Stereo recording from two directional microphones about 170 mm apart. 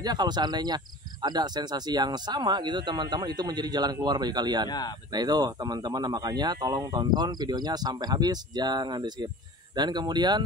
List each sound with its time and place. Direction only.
0.0 s speech: 25° right (ahead or behind)
4.6 s speech: 25° left (ahead or behind)
5.1 s speech: 25° right (ahead or behind)